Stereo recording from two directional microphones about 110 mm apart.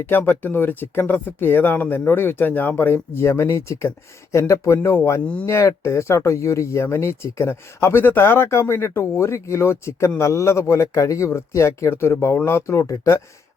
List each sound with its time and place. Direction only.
0.0 s speech: 20° left (ahead or behind)
5.2 s speech: 10° left (ahead or behind)
5.5 s speech: 25° left (ahead or behind)